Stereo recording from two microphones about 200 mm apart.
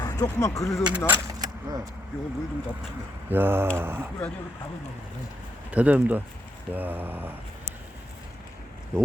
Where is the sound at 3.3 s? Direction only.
10° right (ahead or behind).